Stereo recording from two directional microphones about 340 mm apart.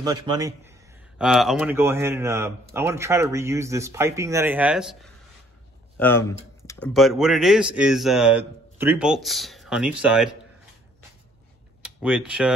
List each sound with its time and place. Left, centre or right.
0.0 s a man's voice: centre
12.0 s speech: centre